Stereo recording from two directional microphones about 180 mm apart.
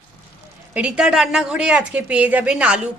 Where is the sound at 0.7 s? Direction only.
5° right (ahead or behind).